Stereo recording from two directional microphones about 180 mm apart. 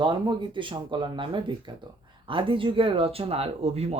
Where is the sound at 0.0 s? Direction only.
25° right (ahead or behind).